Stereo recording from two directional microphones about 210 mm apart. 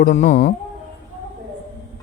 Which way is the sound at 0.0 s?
35° left (ahead or behind).